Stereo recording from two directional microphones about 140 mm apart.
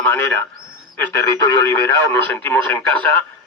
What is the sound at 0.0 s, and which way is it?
Speech, 15° left (ahead or behind).